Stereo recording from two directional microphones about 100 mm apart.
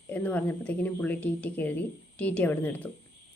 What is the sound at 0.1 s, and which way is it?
A woman's voice, 15° left (ahead or behind).